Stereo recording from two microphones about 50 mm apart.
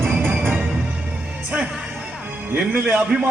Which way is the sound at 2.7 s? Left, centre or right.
Right.